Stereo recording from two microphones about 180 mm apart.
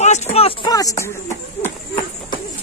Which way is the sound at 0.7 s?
20° left (ahead or behind).